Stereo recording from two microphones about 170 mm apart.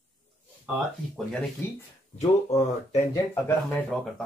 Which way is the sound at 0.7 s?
10° right (ahead or behind).